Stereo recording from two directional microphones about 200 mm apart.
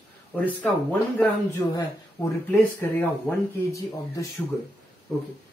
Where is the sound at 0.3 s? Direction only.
5° left (ahead or behind).